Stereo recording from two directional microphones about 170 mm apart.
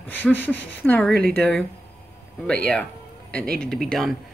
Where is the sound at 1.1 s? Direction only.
65° right (ahead or behind).